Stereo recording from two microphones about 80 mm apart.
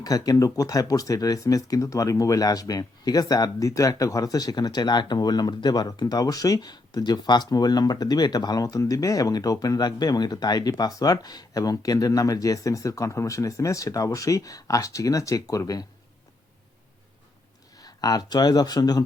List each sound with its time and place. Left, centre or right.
0.0 s speech: left
17.7 s speech: left